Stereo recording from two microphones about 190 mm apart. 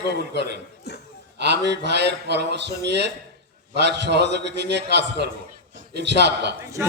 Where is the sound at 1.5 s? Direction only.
65° right (ahead or behind).